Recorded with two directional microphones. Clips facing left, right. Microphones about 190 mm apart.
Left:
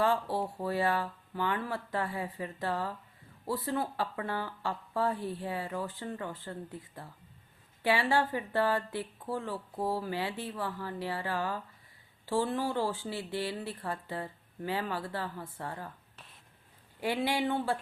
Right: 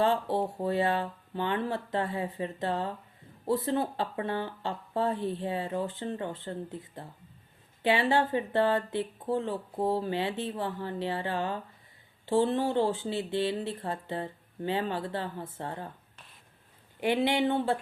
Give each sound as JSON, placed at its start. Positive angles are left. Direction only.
{"t": 0.0, "sound": "speech", "side_deg": -25}
{"t": 16.1, "sound": "a sound", "side_deg": 0}
{"t": 17.0, "sound": "speech", "side_deg": -20}